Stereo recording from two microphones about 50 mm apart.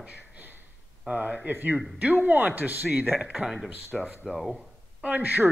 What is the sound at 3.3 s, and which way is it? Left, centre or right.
Speech, centre.